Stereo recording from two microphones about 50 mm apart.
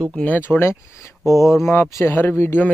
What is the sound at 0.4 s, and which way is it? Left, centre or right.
Speech, left.